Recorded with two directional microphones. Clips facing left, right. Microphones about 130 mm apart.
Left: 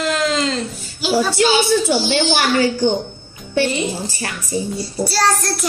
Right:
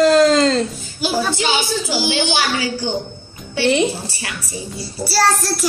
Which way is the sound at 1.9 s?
55° left (ahead or behind).